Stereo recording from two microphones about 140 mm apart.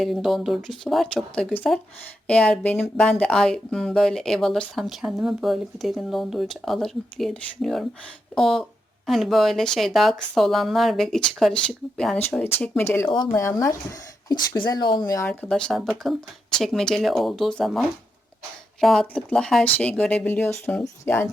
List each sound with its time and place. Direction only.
0.0 s speech: centre (ahead or behind); by 13.7 s 20° left (ahead or behind)
14.3 s speech: 35° left (ahead or behind)
15.3 s speech: 5° left (ahead or behind)